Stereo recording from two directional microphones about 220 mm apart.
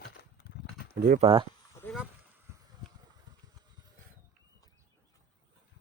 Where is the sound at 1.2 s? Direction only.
25° right (ahead or behind).